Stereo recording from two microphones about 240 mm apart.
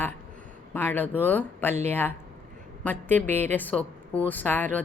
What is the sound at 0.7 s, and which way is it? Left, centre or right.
Speech, centre.